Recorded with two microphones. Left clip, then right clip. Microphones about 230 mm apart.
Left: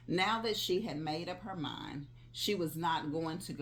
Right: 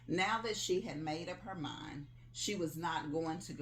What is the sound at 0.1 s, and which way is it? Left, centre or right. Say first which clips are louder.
Speech: left 3 dB; left.